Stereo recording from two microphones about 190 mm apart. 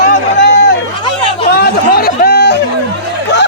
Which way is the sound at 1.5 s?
55° left (ahead or behind).